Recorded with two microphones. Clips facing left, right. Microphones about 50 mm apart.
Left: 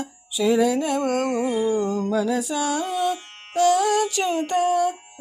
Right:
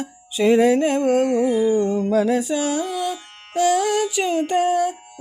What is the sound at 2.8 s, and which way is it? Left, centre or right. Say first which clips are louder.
Music: left 1 dB; left.